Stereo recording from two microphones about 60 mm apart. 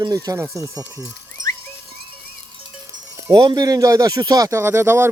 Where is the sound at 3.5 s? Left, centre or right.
Right.